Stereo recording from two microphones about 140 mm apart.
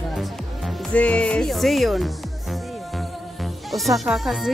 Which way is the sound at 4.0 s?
Centre (ahead or behind).